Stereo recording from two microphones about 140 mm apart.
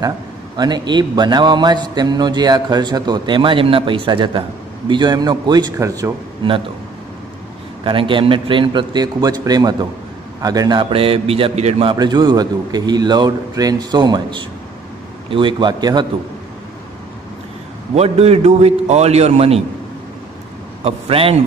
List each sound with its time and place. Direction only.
0.6 s a man's voice: 30° right (ahead or behind)
6.4 s a man's voice: 35° right (ahead or behind)
7.8 s a man's voice: 40° right (ahead or behind)
11.9 s a man's voice: 30° right (ahead or behind)
17.9 s a man's voice: 50° right (ahead or behind)
20.8 s a man's voice: 45° right (ahead or behind)